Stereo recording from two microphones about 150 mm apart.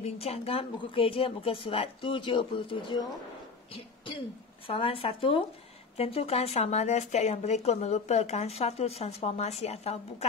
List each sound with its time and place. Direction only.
0.0 s speech: 40° left (ahead or behind)
3.7 s cough: 35° left (ahead or behind)
4.6 s speech: 35° left (ahead or behind)